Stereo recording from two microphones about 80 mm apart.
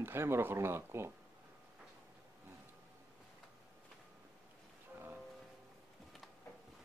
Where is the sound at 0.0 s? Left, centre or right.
Right.